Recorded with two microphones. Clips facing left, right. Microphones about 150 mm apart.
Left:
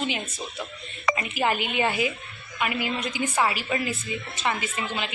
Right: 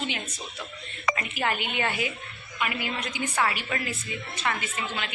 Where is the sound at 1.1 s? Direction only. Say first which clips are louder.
Left 6 dB; 25° left (ahead or behind).